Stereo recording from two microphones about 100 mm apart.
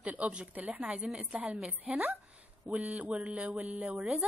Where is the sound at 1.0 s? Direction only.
Centre (ahead or behind).